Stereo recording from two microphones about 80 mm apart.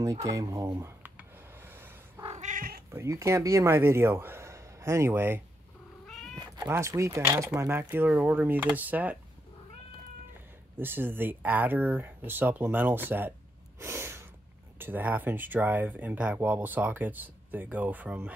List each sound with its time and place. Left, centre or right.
0.0 s speech: right
1.1 s a sound: right
2.9 s speech: right
6.3 s cat: right
6.7 s speech: right
10.8 s speech: right
13.7 s snort: right
14.8 s speech: right